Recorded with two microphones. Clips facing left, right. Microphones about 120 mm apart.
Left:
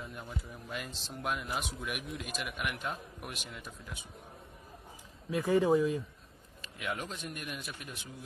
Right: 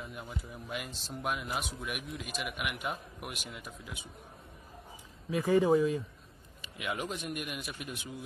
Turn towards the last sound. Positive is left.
turn(degrees=-5)  # may be behind; listen again after turning